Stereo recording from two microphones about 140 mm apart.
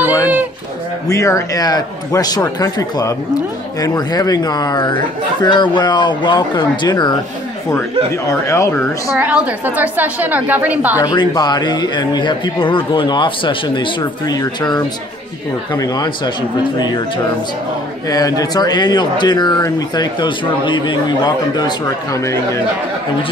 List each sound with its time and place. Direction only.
1.0 s a man's voice: 20° left (ahead or behind)
8.3 s a man's voice: 20° left (ahead or behind)
9.1 s a woman's voice: 10° right (ahead or behind)
11.0 s a man's voice: 30° left (ahead or behind)
18.1 s speech: 25° left (ahead or behind)